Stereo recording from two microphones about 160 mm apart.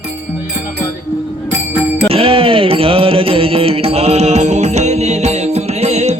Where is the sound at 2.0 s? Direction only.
35° right (ahead or behind).